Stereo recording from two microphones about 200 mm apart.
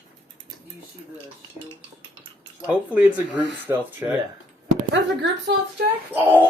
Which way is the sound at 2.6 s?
10° right (ahead or behind).